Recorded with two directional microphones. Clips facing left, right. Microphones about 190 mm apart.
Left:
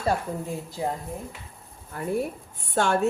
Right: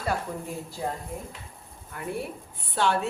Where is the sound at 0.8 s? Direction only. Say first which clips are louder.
Left 3 dB; 15° left (ahead or behind).